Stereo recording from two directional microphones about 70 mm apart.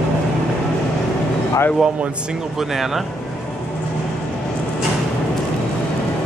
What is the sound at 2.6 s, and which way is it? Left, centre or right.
Speech, centre.